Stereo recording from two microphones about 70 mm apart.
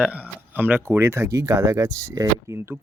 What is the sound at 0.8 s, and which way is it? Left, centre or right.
Speech, right.